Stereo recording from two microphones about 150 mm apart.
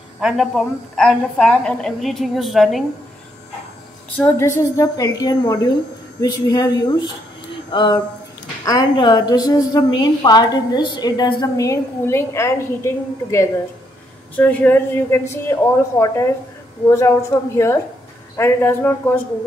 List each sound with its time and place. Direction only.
0.2 s a woman's voice: centre (ahead or behind)
4.2 s a woman's voice: 15° left (ahead or behind)
18.3 s a woman's voice: 15° left (ahead or behind)